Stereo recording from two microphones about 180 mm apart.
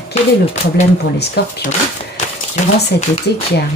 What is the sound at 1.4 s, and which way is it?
Speech, 65° left (ahead or behind).